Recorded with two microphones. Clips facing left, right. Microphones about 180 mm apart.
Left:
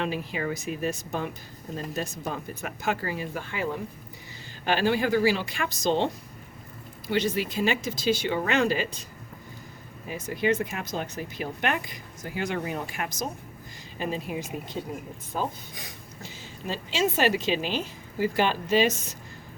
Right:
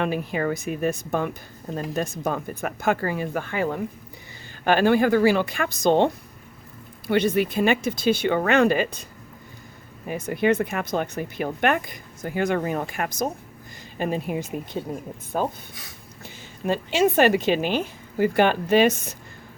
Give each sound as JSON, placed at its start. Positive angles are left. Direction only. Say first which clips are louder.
{"t": 0.0, "sound": "a woman's voice", "louder": "right 5 dB", "side_deg": -50}
{"t": 7.1, "sound": "speech", "louder": "right 6 dB", "side_deg": -55}
{"t": 10.1, "sound": "a woman's voice", "louder": "right 4 dB", "side_deg": -60}